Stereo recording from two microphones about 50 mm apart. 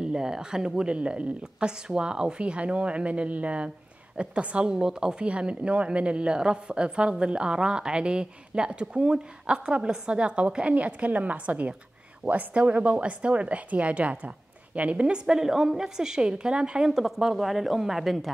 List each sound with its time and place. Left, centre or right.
0.0 s a woman's voice: centre
16.9 s speech: centre